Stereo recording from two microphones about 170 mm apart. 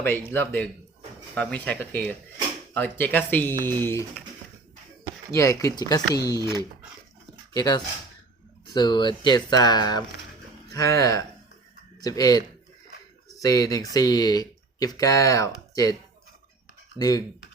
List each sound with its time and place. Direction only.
0.0 s speech: 15° left (ahead or behind)
5.3 s speech: 20° left (ahead or behind)
7.5 s speech: 20° left (ahead or behind)
13.4 s speech: 20° left (ahead or behind)
17.0 s speech: 20° left (ahead or behind)